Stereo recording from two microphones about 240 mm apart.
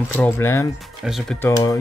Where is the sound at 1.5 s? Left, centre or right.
Centre.